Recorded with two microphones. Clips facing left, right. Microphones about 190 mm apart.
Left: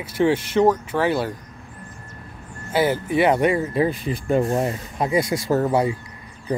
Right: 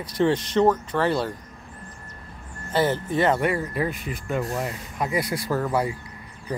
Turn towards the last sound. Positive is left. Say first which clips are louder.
# left 5 dB
turn(degrees=25)  # may be behind; listen again after turning